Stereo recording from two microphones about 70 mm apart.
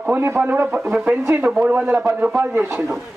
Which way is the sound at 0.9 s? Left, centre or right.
Centre.